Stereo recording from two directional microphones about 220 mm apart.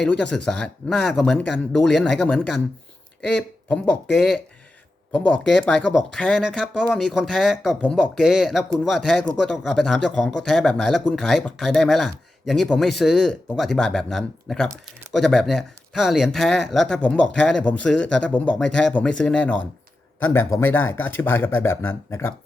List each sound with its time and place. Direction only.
0.0 s speech: 5° left (ahead or behind)